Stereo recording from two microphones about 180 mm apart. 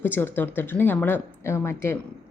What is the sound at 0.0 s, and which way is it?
A woman's voice, 10° left (ahead or behind).